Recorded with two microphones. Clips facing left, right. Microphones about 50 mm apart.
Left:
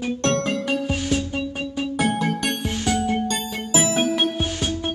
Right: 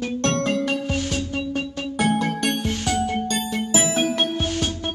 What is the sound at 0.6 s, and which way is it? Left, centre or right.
Music, centre.